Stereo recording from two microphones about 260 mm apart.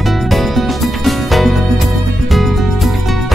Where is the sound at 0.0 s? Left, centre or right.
Centre.